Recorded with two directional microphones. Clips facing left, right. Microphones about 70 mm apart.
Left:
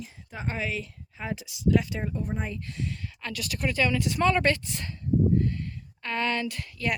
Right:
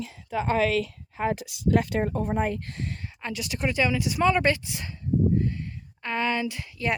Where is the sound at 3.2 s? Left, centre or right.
Right.